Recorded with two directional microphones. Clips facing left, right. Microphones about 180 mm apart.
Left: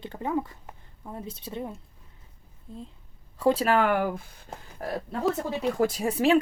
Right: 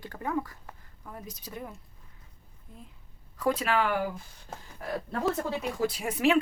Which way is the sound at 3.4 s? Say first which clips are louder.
Left 5 dB; 30° left (ahead or behind).